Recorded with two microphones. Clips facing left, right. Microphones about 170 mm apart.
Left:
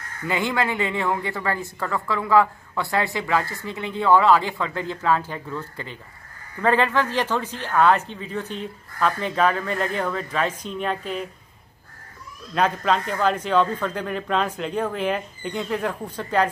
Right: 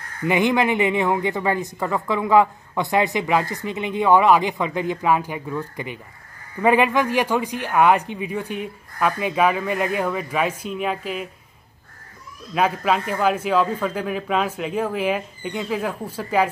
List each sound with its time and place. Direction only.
0.2 s a woman's voice: 20° right (ahead or behind)
12.5 s a woman's voice: 5° right (ahead or behind)